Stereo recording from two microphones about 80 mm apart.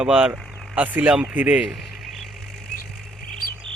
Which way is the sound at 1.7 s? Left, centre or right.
Centre.